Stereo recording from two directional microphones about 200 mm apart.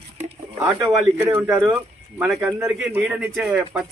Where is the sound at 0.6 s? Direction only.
15° right (ahead or behind).